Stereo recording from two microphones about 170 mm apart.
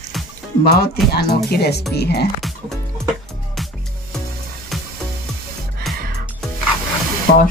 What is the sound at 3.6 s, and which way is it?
Music, centre (ahead or behind).